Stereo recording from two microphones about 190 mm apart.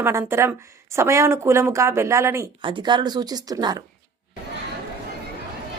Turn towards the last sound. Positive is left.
turn(degrees=-20)  # may be behind; listen again after turning